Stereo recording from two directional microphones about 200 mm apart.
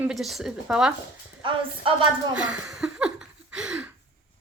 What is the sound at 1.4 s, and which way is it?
Speech, 25° right (ahead or behind).